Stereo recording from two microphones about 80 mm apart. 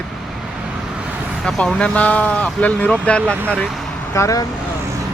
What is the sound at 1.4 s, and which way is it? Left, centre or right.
Speech, centre.